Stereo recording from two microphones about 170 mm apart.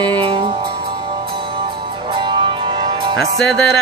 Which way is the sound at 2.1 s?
30° right (ahead or behind).